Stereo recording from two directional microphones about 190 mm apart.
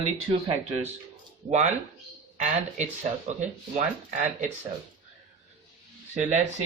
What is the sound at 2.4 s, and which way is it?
Speech, 35° right (ahead or behind).